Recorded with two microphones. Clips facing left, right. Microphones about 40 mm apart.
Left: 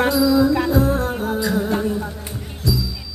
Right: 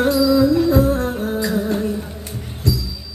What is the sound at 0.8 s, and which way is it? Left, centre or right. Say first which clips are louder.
Music: right 2 dB; left.